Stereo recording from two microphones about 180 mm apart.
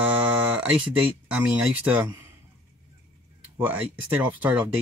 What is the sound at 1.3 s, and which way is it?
Speech, 5° right (ahead or behind).